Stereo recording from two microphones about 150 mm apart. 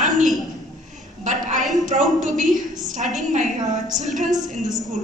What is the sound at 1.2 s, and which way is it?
A woman's voice, 55° right (ahead or behind).